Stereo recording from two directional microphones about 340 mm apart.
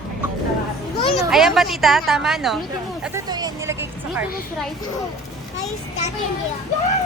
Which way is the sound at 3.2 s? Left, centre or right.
Centre.